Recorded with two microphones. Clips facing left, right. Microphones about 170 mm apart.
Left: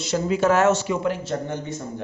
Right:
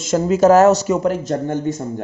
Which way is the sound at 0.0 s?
45° right (ahead or behind).